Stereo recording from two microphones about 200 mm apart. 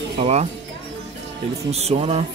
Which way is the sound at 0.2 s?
35° right (ahead or behind).